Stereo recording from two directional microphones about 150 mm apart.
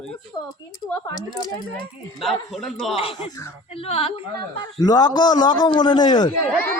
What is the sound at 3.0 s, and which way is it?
Speech, 40° left (ahead or behind).